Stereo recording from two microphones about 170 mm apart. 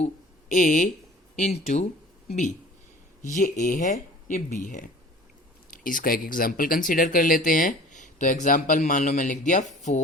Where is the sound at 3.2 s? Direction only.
50° left (ahead or behind).